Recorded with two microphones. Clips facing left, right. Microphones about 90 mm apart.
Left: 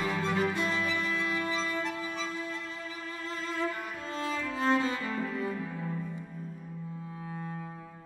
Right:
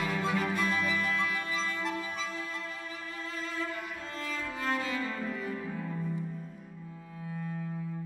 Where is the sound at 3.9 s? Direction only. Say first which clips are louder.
Left 4 dB; 25° left (ahead or behind).